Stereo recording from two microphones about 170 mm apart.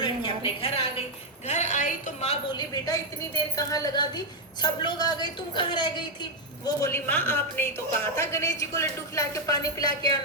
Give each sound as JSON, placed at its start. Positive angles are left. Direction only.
{"t": 0.0, "sound": "a sound", "side_deg": 30}
{"t": 1.5, "sound": "a woman's voice", "side_deg": 45}
{"t": 2.6, "sound": "a woman's voice", "side_deg": 20}
{"t": 6.7, "sound": "a woman's voice", "side_deg": 15}